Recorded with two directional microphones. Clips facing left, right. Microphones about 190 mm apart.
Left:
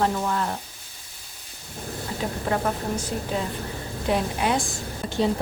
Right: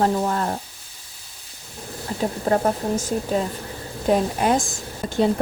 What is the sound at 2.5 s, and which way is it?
A woman's voice, 45° right (ahead or behind).